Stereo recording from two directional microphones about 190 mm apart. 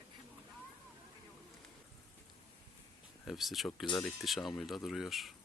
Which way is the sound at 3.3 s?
Centre (ahead or behind).